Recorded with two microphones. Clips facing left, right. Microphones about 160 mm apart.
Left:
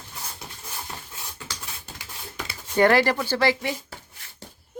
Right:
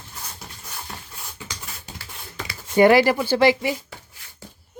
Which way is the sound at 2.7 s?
10° right (ahead or behind).